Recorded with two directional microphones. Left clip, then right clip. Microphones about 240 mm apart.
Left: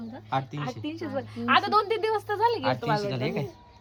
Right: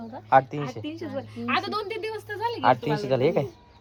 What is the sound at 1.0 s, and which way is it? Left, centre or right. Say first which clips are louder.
A woman's voice: left 4 dB; centre.